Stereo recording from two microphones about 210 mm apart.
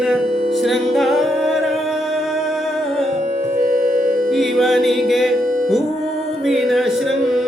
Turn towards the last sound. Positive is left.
turn(degrees=0)  # may be behind; listen again after turning